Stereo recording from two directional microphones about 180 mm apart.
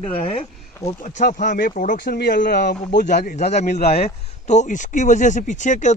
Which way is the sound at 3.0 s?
45° left (ahead or behind).